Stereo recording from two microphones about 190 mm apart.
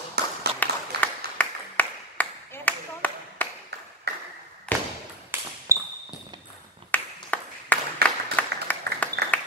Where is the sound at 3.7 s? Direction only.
60° right (ahead or behind).